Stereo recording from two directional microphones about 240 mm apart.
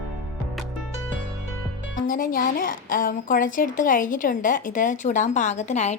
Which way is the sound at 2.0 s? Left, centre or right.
Left.